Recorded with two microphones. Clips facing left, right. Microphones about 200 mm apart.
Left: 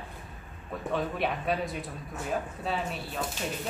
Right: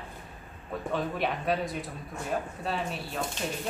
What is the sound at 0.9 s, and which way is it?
Speech, centre (ahead or behind).